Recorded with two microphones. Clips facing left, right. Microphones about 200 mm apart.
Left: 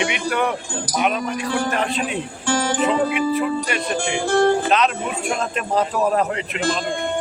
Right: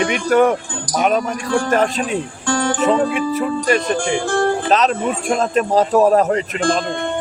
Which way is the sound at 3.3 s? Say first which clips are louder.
Right 4 dB; 40° right (ahead or behind).